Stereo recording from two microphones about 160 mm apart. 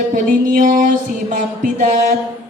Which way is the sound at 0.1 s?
55° right (ahead or behind).